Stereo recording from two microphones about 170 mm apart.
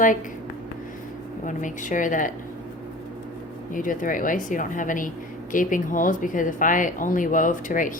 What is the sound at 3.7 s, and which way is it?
Speech, 50° left (ahead or behind).